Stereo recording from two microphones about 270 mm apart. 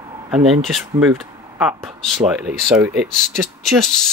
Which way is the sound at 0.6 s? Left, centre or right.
Centre.